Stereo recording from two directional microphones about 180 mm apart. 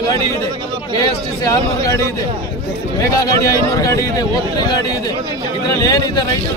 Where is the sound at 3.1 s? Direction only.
20° left (ahead or behind).